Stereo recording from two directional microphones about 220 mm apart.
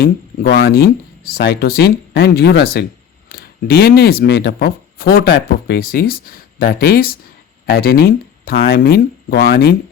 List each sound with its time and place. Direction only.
0.0 s speech: 50° left (ahead or behind)